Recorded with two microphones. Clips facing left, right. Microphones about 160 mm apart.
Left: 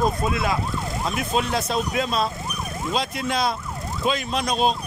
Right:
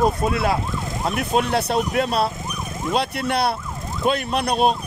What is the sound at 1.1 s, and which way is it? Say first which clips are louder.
Speech: right 4 dB; 60° right (ahead or behind).